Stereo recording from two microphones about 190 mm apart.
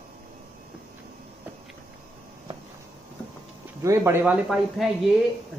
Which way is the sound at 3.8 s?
15° right (ahead or behind).